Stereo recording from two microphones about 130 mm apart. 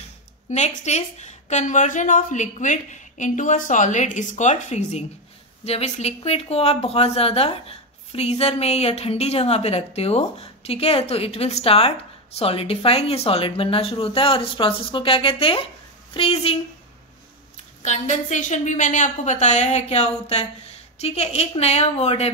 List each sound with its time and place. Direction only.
0.5 s a woman's voice: 60° left (ahead or behind)
17.8 s a woman's voice: 65° left (ahead or behind)